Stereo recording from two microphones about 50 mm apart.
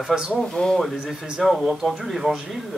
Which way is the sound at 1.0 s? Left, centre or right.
Centre.